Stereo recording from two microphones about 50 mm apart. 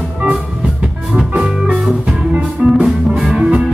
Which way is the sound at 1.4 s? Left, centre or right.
Right.